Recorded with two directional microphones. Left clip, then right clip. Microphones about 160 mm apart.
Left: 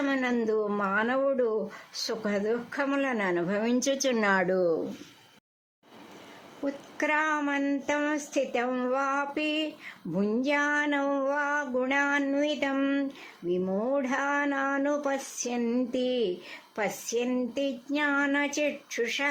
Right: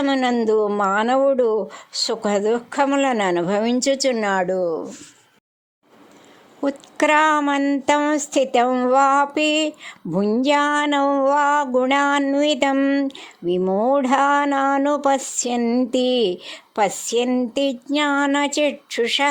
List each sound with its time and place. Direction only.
0.0 s speech: 45° right (ahead or behind)
4.1 s speech: 25° right (ahead or behind)
6.6 s speech: 60° right (ahead or behind); by 9.0 s 40° right (ahead or behind)
9.0 s speech: 55° right (ahead or behind)
12.7 s speech: 40° right (ahead or behind)
13.9 s speech: 55° right (ahead or behind)
15.6 s speech: 40° right (ahead or behind)
15.9 s speech: 55° right (ahead or behind)